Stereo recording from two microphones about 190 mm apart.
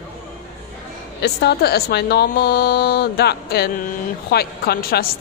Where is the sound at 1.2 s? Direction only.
60° left (ahead or behind).